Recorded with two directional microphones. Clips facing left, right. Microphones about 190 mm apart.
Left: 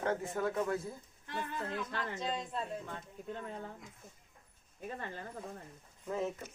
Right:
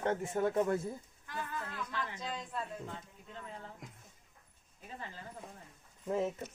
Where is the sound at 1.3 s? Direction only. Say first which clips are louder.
Left 3 dB; 25° left (ahead or behind).